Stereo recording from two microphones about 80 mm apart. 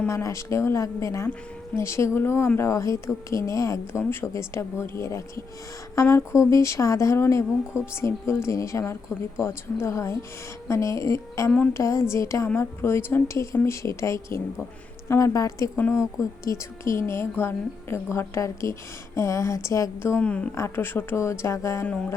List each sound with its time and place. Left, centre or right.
0.1 s a woman's voice: left
15.8 s speech: left
16.1 s a woman's voice: left
20.0 s speech: left
20.2 s a woman's voice: centre
20.6 s a woman's voice: left
21.8 s a woman's voice: centre